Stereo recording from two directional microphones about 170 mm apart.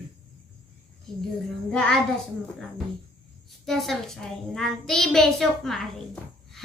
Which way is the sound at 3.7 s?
Centre (ahead or behind).